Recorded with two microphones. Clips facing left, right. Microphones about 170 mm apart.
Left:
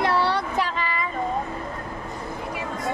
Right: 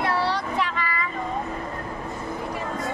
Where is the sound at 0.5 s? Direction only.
30° left (ahead or behind).